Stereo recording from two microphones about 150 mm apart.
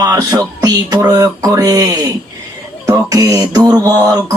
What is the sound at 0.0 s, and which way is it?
Beatboxing, 25° right (ahead or behind).